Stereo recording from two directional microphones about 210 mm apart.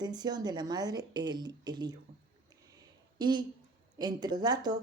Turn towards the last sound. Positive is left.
turn(degrees=-20)  # may be behind; listen again after turning